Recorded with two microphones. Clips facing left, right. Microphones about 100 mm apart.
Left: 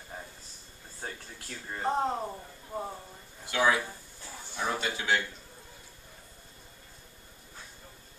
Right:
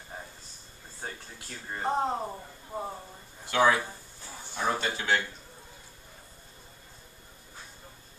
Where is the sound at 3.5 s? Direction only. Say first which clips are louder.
Right 3 dB; 45° right (ahead or behind).